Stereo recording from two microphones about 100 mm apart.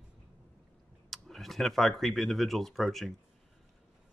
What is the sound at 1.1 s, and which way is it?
Speech, centre (ahead or behind).